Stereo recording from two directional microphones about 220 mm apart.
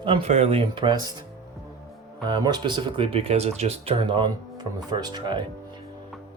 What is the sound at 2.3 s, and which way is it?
Speech, 20° right (ahead or behind).